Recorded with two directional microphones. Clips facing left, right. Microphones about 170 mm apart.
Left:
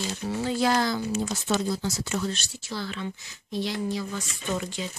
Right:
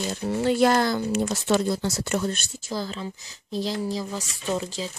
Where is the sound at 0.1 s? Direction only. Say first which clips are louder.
Right 8 dB; 60° right (ahead or behind).